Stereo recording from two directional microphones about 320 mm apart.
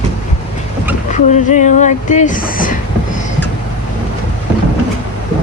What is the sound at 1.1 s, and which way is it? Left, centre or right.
Speech, left.